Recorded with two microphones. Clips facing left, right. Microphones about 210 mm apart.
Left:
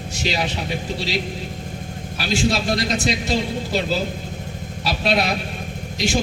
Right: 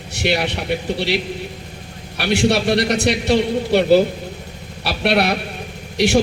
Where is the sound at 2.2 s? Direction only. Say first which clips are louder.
Right 5 dB; 65° right (ahead or behind).